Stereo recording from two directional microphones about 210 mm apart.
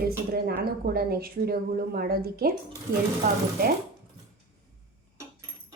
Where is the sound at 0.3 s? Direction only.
45° right (ahead or behind).